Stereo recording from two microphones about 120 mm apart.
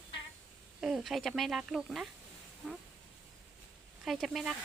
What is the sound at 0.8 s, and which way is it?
Speech, centre (ahead or behind).